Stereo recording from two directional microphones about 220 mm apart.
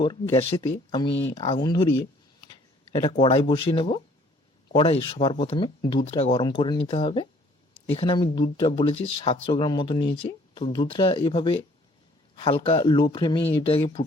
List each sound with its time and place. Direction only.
0.0 s speech: 25° left (ahead or behind)